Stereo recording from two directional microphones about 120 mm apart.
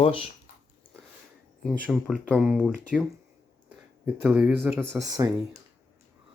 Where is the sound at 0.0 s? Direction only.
55° left (ahead or behind).